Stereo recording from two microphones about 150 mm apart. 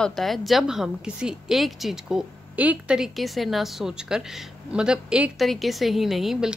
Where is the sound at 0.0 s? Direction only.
Centre (ahead or behind).